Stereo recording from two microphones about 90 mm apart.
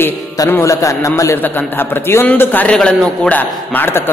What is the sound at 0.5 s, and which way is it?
Speech, 35° left (ahead or behind).